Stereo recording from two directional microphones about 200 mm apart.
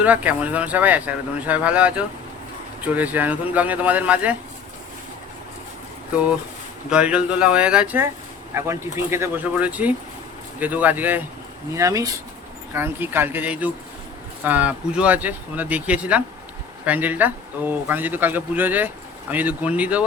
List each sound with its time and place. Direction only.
0.0 s speech: 5° right (ahead or behind)
6.9 s speech: 5° right (ahead or behind)